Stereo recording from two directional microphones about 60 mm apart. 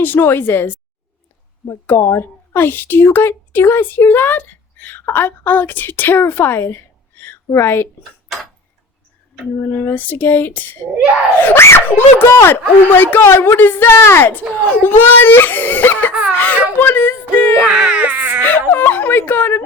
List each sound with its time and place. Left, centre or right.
0.0 s speech: left
2.0 s a woman's voice: left
9.6 s speech: left
9.9 s speech: left
17.7 s baby cry: centre
18.7 s speech: left